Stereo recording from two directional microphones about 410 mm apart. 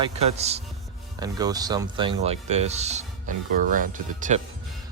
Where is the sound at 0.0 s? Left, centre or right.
Centre.